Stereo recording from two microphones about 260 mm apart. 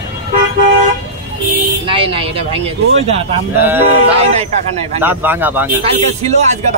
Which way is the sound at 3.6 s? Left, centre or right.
Centre.